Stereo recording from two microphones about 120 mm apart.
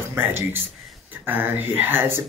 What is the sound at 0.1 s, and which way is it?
Speech, 20° right (ahead or behind).